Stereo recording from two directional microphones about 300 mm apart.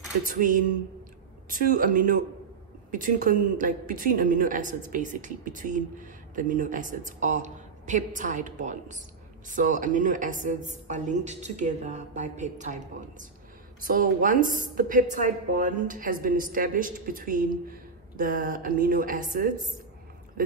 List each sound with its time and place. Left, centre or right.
0.3 s speech: right